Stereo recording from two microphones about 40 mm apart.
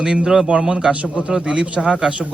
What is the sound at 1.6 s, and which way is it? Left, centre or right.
Speech, right.